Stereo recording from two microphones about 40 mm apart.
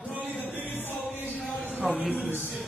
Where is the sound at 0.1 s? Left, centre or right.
Right.